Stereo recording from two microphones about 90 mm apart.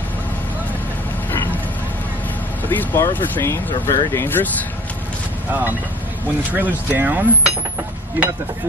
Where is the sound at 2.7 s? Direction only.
20° left (ahead or behind).